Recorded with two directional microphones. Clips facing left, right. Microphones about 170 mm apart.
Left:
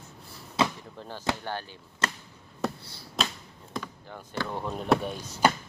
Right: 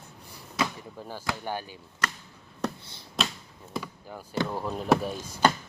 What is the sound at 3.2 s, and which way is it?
Tap, centre (ahead or behind).